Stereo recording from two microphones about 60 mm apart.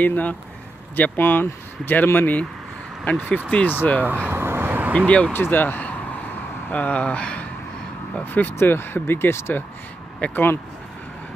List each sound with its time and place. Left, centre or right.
0.0 s speech: left
4.0 s speech: right
4.3 s vehicle: right
4.9 s speech: left
5.3 s speech: left; by 7.4 s centre
8.3 s speech: left